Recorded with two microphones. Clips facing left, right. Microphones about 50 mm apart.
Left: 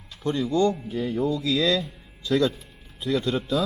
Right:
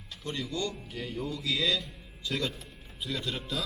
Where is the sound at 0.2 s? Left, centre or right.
Left.